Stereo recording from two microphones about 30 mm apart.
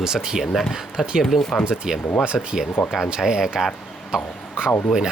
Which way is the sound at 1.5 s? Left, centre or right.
Centre.